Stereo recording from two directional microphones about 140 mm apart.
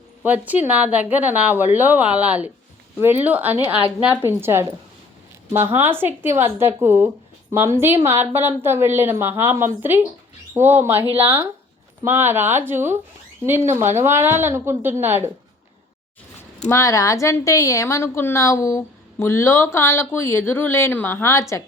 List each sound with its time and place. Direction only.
0.2 s a woman's voice: 10° right (ahead or behind)
11.0 s speech: 45° right (ahead or behind)
11.3 s a woman's voice: 15° right (ahead or behind)
16.6 s a woman's voice: 25° left (ahead or behind)